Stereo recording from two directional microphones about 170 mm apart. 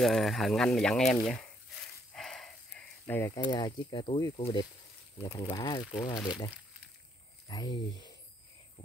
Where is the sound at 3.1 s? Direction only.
15° left (ahead or behind).